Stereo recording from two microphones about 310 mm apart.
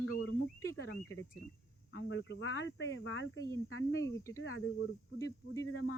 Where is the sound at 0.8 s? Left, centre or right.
Left.